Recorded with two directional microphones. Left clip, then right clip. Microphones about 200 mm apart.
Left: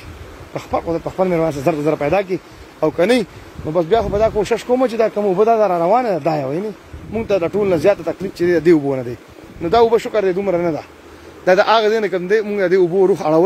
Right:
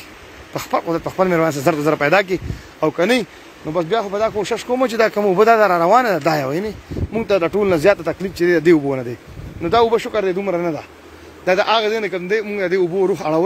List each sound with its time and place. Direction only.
0.6 s speech: centre (ahead or behind)
3.0 s speech: 10° left (ahead or behind)
4.9 s speech: centre (ahead or behind)
5.2 s speech: 10° right (ahead or behind); by 10.9 s 20° left (ahead or behind)
11.4 s a man's voice: 30° left (ahead or behind)